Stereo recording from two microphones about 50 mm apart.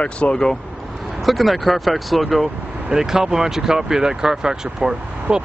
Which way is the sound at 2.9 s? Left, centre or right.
Centre.